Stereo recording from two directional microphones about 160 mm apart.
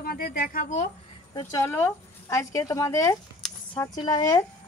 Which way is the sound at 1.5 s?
15° left (ahead or behind).